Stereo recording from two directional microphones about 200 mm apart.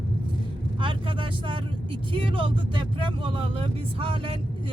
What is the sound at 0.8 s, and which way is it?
Speech, 25° right (ahead or behind).